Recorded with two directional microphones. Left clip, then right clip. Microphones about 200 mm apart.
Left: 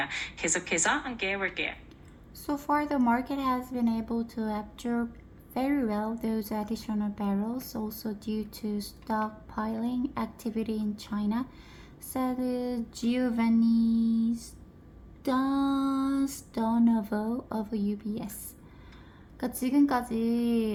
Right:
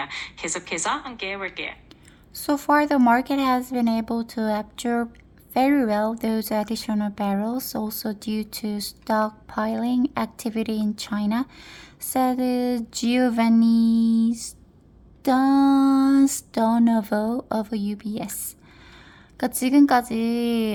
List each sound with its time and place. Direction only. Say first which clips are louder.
0.0 s a woman's voice: right 1 dB; 25° left (ahead or behind)
2.3 s speech: right 9 dB; 55° right (ahead or behind)
19.4 s speech: right 8 dB; 50° right (ahead or behind)